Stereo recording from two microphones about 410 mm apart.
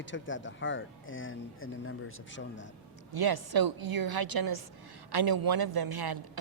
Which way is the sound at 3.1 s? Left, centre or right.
Right.